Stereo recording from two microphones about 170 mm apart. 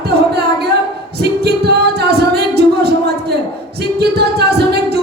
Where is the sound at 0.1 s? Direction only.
70° right (ahead or behind).